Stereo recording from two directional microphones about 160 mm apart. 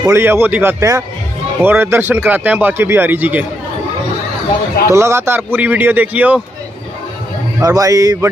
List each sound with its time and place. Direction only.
0.0 s speech: 15° right (ahead or behind)
4.8 s speech: 15° right (ahead or behind)
7.6 s speech: 20° right (ahead or behind)